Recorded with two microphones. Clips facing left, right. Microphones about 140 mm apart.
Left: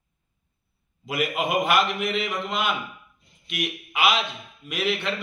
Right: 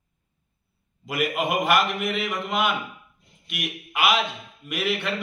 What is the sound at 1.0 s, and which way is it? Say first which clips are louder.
A man's voice: right 1 dB; 5° right (ahead or behind).